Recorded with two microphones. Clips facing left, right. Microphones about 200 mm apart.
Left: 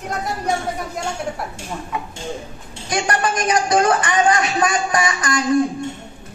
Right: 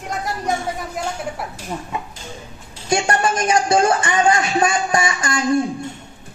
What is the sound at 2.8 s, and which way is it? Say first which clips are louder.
Speech: right 2 dB; 25° right (ahead or behind).